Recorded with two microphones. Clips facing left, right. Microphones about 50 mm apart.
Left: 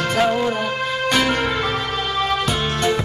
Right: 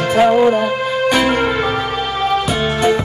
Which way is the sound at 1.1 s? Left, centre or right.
Centre.